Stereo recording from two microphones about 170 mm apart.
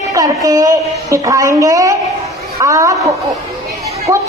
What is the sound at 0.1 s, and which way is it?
A woman's voice, 20° right (ahead or behind).